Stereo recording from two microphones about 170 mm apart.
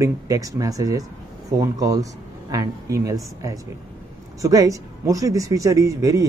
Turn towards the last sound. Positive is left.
turn(degrees=-20)  # may be behind; listen again after turning